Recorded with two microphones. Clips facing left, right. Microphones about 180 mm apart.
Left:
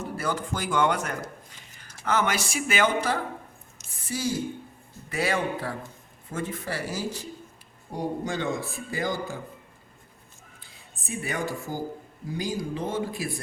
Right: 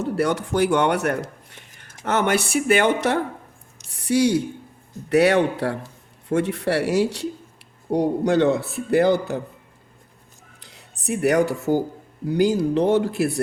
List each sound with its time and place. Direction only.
0.0 s a man's voice: 75° right (ahead or behind)
10.6 s a man's voice: 75° right (ahead or behind)